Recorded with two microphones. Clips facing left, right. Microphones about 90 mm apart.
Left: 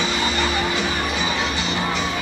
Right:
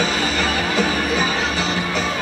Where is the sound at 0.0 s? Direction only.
40° right (ahead or behind).